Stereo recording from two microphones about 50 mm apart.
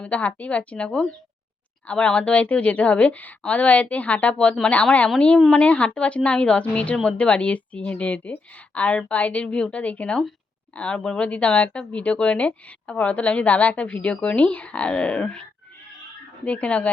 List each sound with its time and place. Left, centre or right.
0.0 s a woman's voice: left